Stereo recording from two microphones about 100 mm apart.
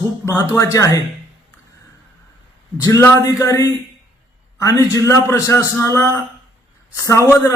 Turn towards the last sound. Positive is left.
turn(degrees=30)  # may be behind; listen again after turning